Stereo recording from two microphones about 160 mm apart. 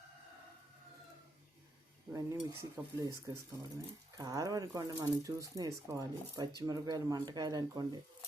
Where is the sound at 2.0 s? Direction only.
15° right (ahead or behind).